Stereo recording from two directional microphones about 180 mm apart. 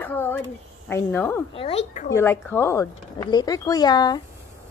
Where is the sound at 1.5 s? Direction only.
30° left (ahead or behind).